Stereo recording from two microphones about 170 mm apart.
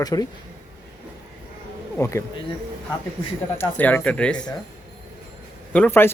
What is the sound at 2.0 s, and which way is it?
Speech, 15° left (ahead or behind).